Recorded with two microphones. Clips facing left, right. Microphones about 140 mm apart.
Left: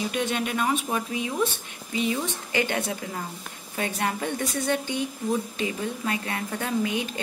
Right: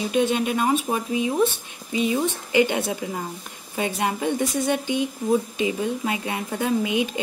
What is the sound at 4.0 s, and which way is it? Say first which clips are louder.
Speech: right 5 dB; 15° right (ahead or behind).